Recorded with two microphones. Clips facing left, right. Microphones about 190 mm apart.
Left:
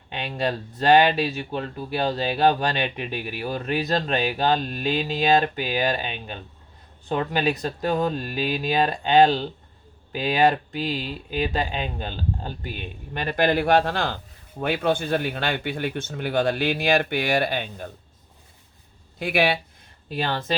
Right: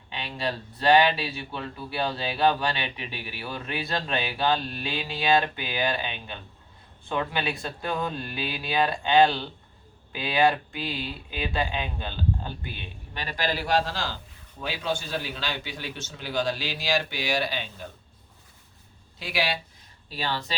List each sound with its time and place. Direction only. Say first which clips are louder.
0.1 s a man's voice: left 5 dB; 50° left (ahead or behind)
19.2 s a man's voice: left 7 dB; 55° left (ahead or behind)